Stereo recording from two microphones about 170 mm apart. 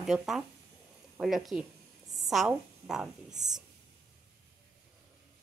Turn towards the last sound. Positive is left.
turn(degrees=-5)  # may be behind; listen again after turning